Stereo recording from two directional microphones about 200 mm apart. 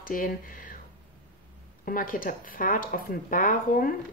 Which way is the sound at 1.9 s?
45° left (ahead or behind).